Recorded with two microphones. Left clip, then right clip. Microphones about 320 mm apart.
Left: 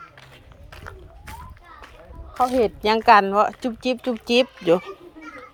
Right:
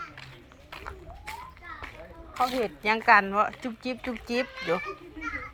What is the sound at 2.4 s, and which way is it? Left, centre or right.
Speech, left.